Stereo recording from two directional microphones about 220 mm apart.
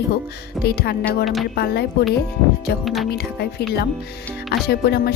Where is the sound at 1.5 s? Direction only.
45° left (ahead or behind).